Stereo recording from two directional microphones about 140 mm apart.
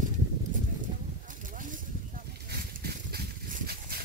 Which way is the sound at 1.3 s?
70° right (ahead or behind).